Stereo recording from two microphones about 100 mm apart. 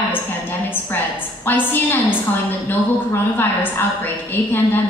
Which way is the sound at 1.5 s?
20° left (ahead or behind).